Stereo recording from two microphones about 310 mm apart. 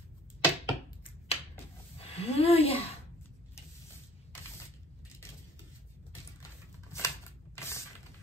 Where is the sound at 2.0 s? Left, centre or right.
Centre.